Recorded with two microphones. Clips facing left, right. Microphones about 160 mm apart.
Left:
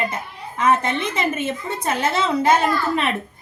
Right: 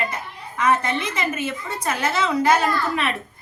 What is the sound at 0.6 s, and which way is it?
Speech, 55° left (ahead or behind).